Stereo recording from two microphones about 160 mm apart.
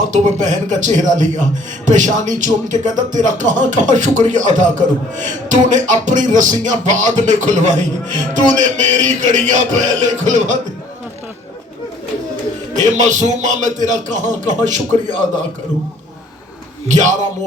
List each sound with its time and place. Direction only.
0.0 s a man's voice: 50° right (ahead or behind)
12.7 s a man's voice: 50° right (ahead or behind)
16.9 s a man's voice: 50° right (ahead or behind)